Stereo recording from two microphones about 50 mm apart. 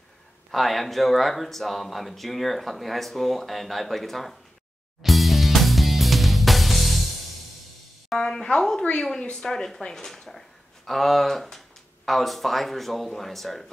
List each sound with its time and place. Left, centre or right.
0.5 s speech: centre
5.0 s music: centre
8.3 s speech: centre